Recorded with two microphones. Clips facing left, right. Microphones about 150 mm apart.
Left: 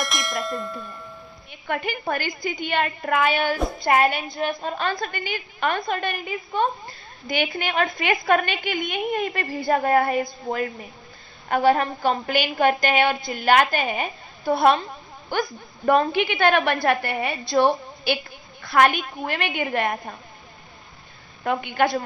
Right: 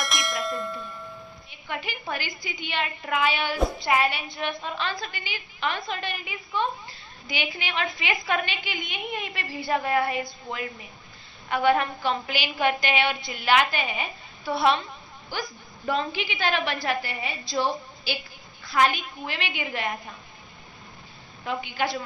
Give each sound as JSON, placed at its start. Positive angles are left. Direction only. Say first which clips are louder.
{"t": 0.0, "sound": "bell", "louder": "left 2 dB", "side_deg": 0}
{"t": 1.5, "sound": "a woman's voice", "louder": "left 7 dB", "side_deg": 50}
{"t": 21.4, "sound": "a woman's voice", "louder": "left 6 dB", "side_deg": 55}